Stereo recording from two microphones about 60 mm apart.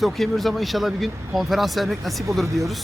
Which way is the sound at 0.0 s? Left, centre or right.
Centre.